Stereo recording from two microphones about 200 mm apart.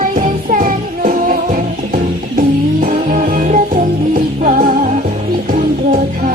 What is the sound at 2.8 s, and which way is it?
Music, 45° right (ahead or behind).